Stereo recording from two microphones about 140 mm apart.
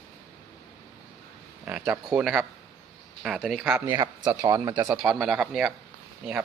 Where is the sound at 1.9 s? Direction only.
5° right (ahead or behind).